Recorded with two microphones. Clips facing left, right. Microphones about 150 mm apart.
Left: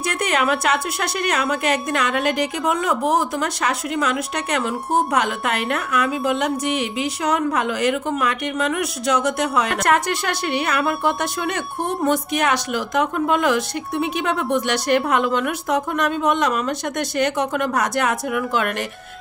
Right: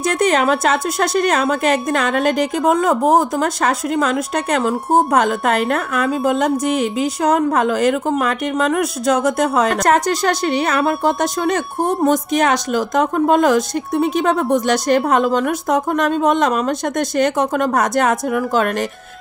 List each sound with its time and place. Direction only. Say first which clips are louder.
0.2 s a woman's voice: right 5 dB; 40° right (ahead or behind)
12.1 s a woman's voice: right 1 dB; 45° right (ahead or behind)